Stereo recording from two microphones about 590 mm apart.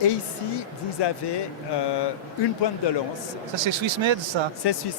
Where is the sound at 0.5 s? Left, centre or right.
Left.